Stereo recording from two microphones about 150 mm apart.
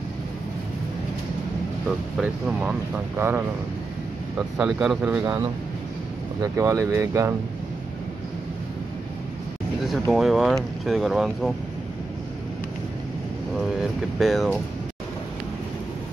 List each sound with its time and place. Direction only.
1.9 s speech: 5° right (ahead or behind)
2.6 s speech: 15° right (ahead or behind)
4.6 s speech: 5° right (ahead or behind)
6.4 s speech: 20° right (ahead or behind)
10.1 s speech: centre (ahead or behind)
13.6 s speech: centre (ahead or behind)